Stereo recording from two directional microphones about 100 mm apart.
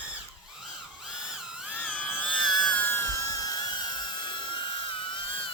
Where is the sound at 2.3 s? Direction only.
5° left (ahead or behind).